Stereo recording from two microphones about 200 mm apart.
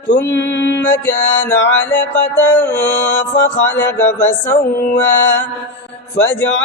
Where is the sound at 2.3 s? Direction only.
10° left (ahead or behind).